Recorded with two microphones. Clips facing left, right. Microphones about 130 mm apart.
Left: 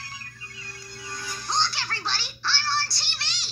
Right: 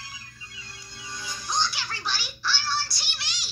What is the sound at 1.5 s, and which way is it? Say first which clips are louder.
Music: left 1 dB; 30° left (ahead or behind).